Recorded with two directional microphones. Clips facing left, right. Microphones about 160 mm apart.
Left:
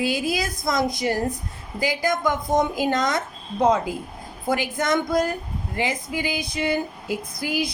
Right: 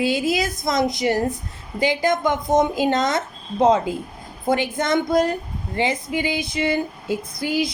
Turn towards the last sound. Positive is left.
turn(degrees=-25)  # may be behind; listen again after turning